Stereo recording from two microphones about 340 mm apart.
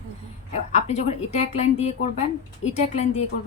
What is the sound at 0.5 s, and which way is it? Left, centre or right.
Speech, centre.